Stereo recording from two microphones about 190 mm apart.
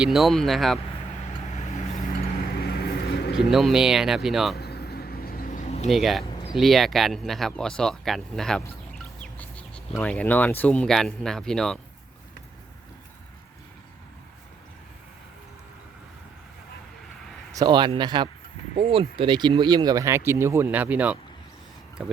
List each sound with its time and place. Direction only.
0.0 s speech: centre (ahead or behind)
1.2 s vehicle: 40° left (ahead or behind)
2.6 s vehicle: 55° left (ahead or behind)
3.5 s speech: centre (ahead or behind)
4.5 s vehicle: 60° left (ahead or behind); by 5.9 s 35° left (ahead or behind)
5.9 s speech: centre (ahead or behind)
17.5 s speech: 20° right (ahead or behind); by 22.1 s 5° right (ahead or behind)